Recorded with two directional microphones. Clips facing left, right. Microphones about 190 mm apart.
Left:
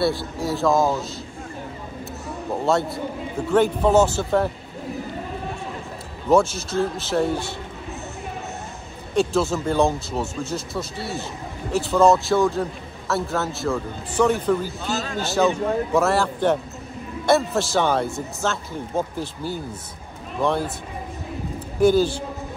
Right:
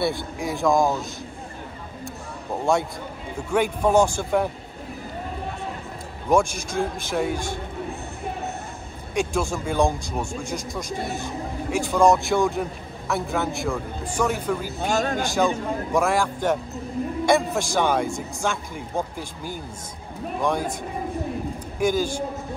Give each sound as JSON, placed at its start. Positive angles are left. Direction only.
{"t": 0.0, "sound": "a man's voice", "side_deg": -15}
{"t": 3.5, "sound": "a man's voice", "side_deg": -10}
{"t": 6.3, "sound": "a man's voice", "side_deg": -15}
{"t": 9.1, "sound": "a man's voice", "side_deg": -15}
{"t": 11.7, "sound": "a man's voice", "side_deg": -15}
{"t": 14.8, "sound": "a man's voice", "side_deg": -55}
{"t": 15.1, "sound": "a man's voice", "side_deg": -15}
{"t": 21.7, "sound": "a man's voice", "side_deg": -10}